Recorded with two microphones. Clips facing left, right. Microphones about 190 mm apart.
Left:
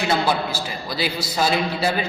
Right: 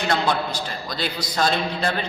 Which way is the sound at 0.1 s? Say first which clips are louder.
Even; 5° left (ahead or behind).